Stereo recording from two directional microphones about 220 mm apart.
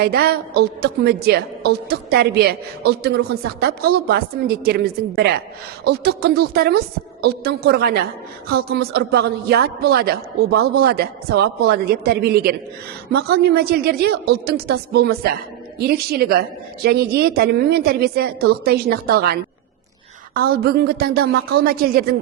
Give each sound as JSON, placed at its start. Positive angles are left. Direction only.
{"t": 0.0, "sound": "a woman's voice", "side_deg": -45}